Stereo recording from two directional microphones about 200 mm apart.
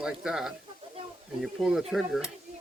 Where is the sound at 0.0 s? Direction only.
5° right (ahead or behind).